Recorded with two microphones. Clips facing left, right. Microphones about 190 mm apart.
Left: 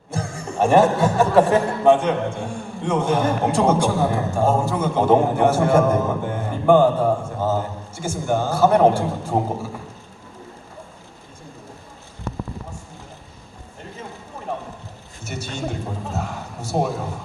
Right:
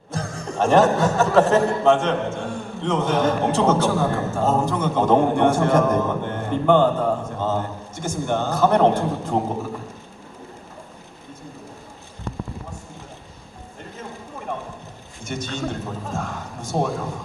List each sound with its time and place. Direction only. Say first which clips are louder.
0.1 s speech: left 1 dB; 10° left (ahead or behind)
15.2 s a man's voice: right 1 dB; 5° left (ahead or behind)